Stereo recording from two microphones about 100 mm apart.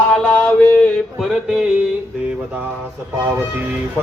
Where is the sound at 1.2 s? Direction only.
Centre (ahead or behind).